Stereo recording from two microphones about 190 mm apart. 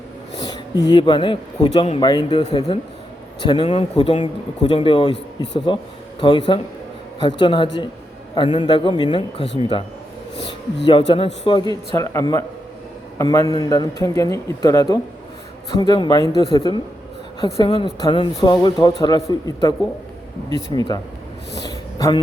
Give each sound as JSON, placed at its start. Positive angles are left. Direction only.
{"t": 0.4, "sound": "speech", "side_deg": 20}
{"t": 11.1, "sound": "a man's voice", "side_deg": 25}
{"t": 21.7, "sound": "a sound", "side_deg": 20}